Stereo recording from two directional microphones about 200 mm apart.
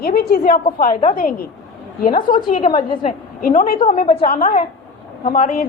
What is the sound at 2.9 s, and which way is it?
Speech, 30° left (ahead or behind).